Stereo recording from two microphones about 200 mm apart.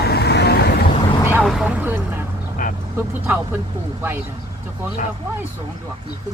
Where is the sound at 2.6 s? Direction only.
40° left (ahead or behind).